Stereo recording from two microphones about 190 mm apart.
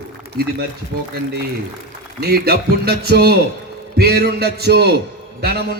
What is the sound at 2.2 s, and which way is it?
A man's voice, 55° right (ahead or behind).